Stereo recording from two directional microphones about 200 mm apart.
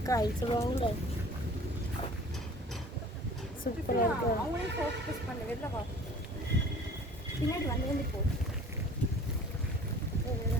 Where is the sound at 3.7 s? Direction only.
45° left (ahead or behind).